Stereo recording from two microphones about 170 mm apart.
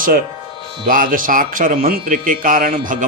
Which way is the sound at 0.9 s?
55° right (ahead or behind).